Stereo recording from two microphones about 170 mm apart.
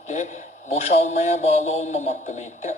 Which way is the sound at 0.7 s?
40° left (ahead or behind).